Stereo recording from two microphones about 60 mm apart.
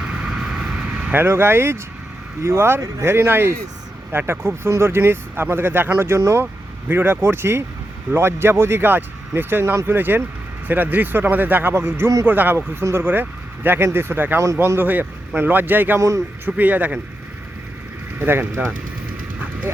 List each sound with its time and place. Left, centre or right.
0.0 s vehicle: centre
1.1 s speech: right
6.4 s speech: right
12.5 s speech: right
14.3 s speech: right
14.8 s speech: right
16.0 s speech: right
16.5 s speech: right
18.2 s speech: right